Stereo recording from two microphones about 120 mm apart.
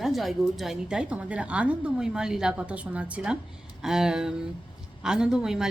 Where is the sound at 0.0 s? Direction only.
Centre (ahead or behind).